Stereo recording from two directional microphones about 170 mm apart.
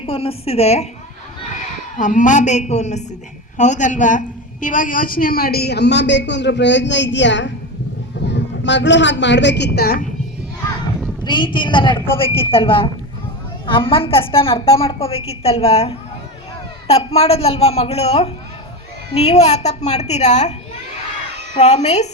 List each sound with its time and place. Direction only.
0.0 s a woman's voice: 35° left (ahead or behind)
2.0 s a woman's voice: 45° left (ahead or behind); by 10.0 s 65° left (ahead or behind)
11.2 s a woman's voice: 25° left (ahead or behind)
21.5 s a woman's voice: 40° left (ahead or behind)